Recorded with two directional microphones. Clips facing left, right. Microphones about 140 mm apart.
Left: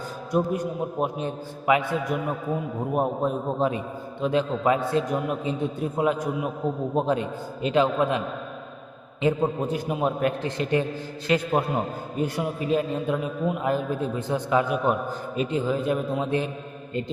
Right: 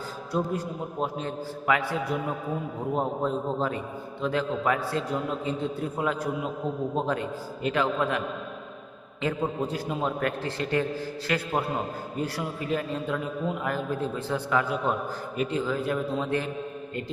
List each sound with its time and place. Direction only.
0.3 s a man's voice: 15° left (ahead or behind)
9.2 s a man's voice: 20° left (ahead or behind)